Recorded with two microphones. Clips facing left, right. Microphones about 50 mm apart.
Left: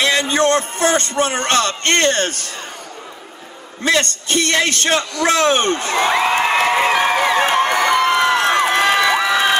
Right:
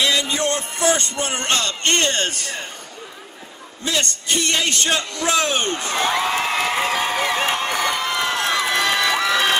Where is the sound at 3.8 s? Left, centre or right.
Left.